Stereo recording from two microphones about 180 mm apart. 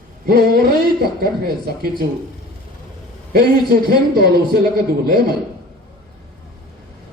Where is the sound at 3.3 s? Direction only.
60° right (ahead or behind).